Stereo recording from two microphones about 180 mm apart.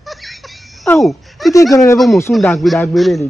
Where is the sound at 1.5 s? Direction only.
20° left (ahead or behind).